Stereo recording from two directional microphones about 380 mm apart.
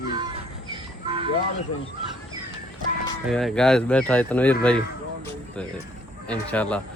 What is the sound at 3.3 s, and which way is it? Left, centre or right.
Speech, centre.